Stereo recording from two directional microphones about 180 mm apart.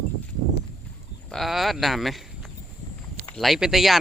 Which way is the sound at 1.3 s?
Centre (ahead or behind).